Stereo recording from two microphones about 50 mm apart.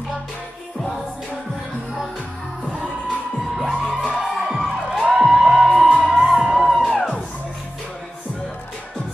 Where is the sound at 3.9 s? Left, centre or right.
Centre.